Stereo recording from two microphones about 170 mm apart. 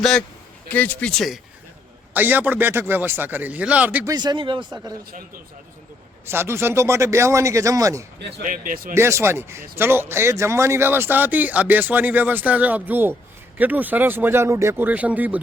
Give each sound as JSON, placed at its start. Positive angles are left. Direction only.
{"t": 0.0, "sound": "a man's voice", "side_deg": 5}
{"t": 2.1, "sound": "speech", "side_deg": -10}
{"t": 4.1, "sound": "speech", "side_deg": -25}
{"t": 6.2, "sound": "speech", "side_deg": -15}
{"t": 8.4, "sound": "speech", "side_deg": -55}
{"t": 9.0, "sound": "speech", "side_deg": -15}